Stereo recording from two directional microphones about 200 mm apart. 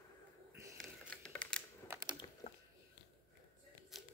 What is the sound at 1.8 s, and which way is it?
Typing, 15° right (ahead or behind).